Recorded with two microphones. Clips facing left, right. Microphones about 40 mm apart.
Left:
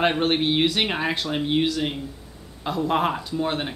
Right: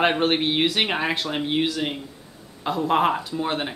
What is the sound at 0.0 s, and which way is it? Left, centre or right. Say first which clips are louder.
Speech: right 1 dB; centre.